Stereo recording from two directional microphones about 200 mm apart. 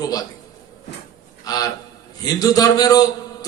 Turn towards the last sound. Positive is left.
turn(degrees=20)  # may be behind; listen again after turning